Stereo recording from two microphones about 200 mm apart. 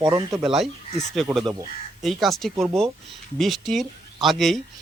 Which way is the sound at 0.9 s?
35° left (ahead or behind).